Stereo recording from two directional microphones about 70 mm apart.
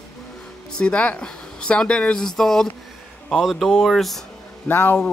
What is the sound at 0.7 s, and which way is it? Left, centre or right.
Speech, centre.